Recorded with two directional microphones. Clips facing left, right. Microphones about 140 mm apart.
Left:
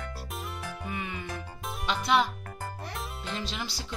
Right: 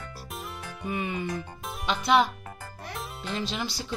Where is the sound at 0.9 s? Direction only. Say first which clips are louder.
Right 8 dB; 20° right (ahead or behind).